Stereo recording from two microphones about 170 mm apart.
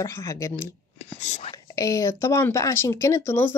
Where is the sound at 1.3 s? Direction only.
35° left (ahead or behind).